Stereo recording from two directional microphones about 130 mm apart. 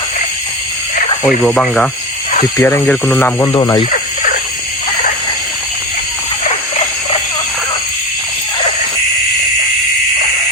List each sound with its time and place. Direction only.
1.5 s speech: 5° left (ahead or behind)
2.6 s speech: 20° left (ahead or behind)
2.8 s speech: 10° left (ahead or behind)
3.4 s speech: 30° left (ahead or behind)